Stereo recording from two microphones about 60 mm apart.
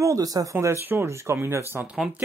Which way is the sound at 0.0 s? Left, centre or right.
Right.